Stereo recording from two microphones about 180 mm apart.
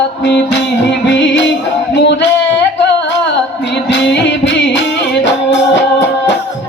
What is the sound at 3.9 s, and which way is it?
Music, 75° left (ahead or behind).